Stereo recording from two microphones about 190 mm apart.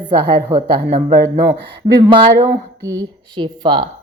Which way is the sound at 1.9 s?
20° right (ahead or behind).